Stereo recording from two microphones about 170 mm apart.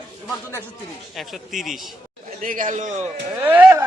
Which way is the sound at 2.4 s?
50° right (ahead or behind).